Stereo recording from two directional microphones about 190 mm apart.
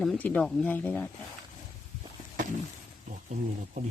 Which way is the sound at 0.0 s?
5° left (ahead or behind).